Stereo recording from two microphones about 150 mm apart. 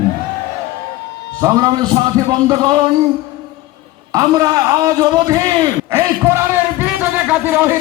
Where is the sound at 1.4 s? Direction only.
25° right (ahead or behind).